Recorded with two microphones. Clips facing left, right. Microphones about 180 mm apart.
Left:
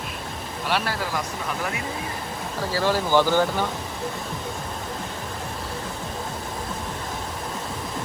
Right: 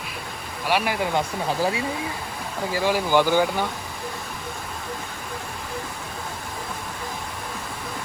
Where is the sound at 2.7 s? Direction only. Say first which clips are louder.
Even; 15° right (ahead or behind).